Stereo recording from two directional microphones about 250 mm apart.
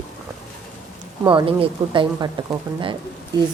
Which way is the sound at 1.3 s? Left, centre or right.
Right.